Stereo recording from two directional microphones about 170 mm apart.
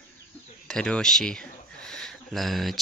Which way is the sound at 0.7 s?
5° left (ahead or behind).